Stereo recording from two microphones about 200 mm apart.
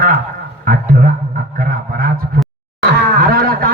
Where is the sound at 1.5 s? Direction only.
45° right (ahead or behind).